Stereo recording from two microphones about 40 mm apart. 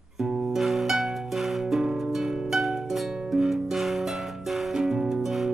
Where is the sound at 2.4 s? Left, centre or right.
Centre.